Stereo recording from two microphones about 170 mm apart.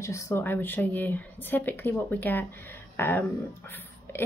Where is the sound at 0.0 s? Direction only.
15° left (ahead or behind).